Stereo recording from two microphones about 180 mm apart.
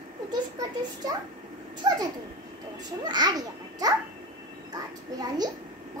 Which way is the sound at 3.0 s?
25° right (ahead or behind).